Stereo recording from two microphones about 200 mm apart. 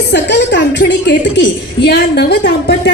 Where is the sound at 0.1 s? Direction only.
60° left (ahead or behind).